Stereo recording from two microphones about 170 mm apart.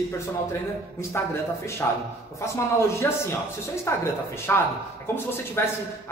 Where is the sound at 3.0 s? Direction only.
10° left (ahead or behind).